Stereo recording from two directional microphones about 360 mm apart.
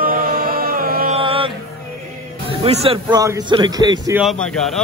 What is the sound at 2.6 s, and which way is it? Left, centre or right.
A man's voice, centre.